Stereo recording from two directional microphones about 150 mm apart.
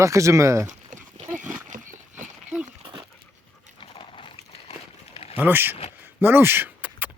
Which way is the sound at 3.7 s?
35° left (ahead or behind).